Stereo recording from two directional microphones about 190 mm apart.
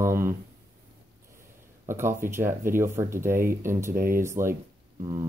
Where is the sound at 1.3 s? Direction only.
15° right (ahead or behind).